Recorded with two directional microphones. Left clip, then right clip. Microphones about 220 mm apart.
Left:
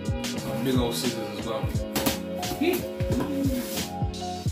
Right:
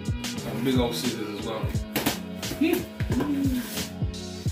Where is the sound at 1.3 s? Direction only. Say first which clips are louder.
Left 1 dB; 15° left (ahead or behind).